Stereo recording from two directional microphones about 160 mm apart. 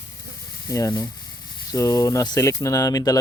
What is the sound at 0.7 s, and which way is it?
Speech, 20° left (ahead or behind).